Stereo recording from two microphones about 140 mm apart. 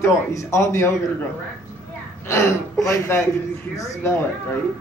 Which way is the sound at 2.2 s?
20° left (ahead or behind).